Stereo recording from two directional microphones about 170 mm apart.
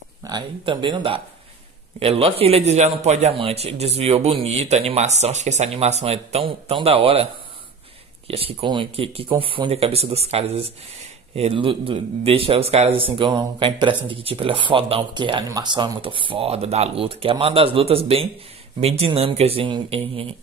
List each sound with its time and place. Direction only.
0.2 s speech: 25° right (ahead or behind)
8.3 s speech: 35° right (ahead or behind)